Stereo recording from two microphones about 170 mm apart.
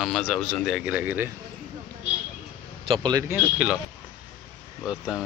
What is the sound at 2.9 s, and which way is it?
Speech, 25° right (ahead or behind).